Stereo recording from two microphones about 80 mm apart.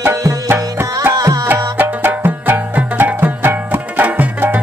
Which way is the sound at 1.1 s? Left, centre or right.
Right.